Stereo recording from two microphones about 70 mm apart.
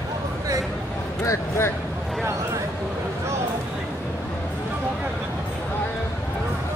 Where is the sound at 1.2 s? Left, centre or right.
Left.